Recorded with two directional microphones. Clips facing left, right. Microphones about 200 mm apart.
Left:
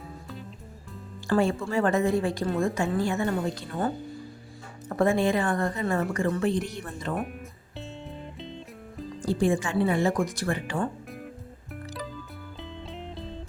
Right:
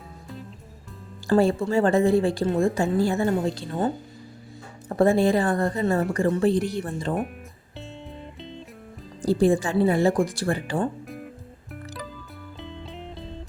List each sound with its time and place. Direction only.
1.3 s a woman's voice: 35° right (ahead or behind)
8.4 s music: centre (ahead or behind)
9.2 s speech: 35° right (ahead or behind)
12.5 s music: centre (ahead or behind)